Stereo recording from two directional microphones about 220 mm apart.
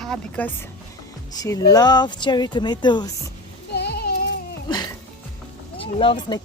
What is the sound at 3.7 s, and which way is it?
Music, 50° left (ahead or behind).